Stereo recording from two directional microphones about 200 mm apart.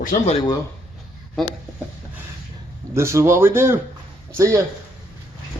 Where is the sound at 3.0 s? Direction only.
15° right (ahead or behind).